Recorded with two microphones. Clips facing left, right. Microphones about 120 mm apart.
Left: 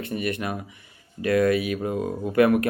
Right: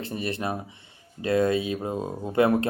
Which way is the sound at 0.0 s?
30° right (ahead or behind).